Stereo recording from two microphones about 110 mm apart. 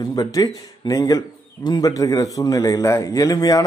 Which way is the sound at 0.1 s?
35° left (ahead or behind).